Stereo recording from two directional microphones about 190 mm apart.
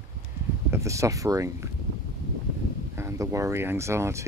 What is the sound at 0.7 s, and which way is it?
Speech, 15° right (ahead or behind).